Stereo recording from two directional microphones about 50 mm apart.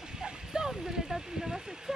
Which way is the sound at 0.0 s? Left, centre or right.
Centre.